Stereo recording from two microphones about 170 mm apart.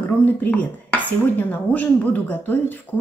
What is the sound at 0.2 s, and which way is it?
Speech, 10° left (ahead or behind).